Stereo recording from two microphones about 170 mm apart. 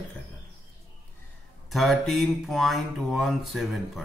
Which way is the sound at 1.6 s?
Centre (ahead or behind).